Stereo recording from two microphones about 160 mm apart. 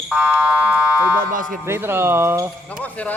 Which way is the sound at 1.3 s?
60° right (ahead or behind).